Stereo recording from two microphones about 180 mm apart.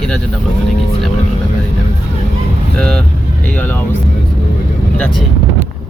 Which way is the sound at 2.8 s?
5° left (ahead or behind).